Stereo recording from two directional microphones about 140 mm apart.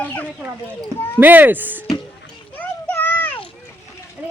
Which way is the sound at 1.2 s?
15° right (ahead or behind).